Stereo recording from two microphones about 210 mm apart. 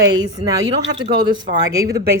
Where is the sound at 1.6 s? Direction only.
15° right (ahead or behind).